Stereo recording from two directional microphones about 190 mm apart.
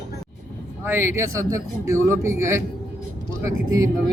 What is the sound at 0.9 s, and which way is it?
A man's voice, 15° right (ahead or behind).